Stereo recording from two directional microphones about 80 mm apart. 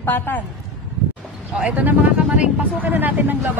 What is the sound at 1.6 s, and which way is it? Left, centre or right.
Speech, centre.